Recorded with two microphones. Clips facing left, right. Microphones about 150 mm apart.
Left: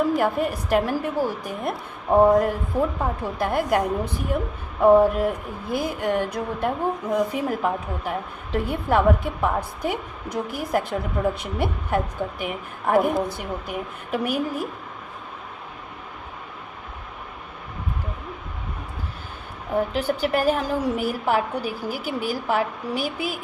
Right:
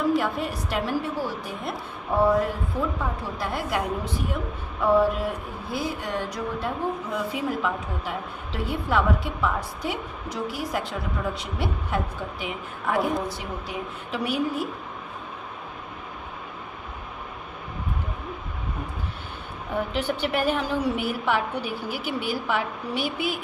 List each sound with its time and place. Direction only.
0.1 s a woman's voice: 45° left (ahead or behind)
19.7 s a woman's voice: 40° left (ahead or behind)